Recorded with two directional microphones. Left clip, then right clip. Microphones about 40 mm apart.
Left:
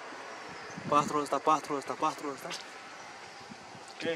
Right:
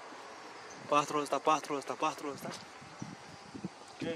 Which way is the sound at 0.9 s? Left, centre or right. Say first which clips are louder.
Left 2 dB; right.